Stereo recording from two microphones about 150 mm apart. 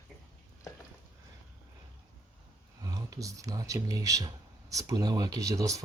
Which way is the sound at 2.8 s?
25° right (ahead or behind).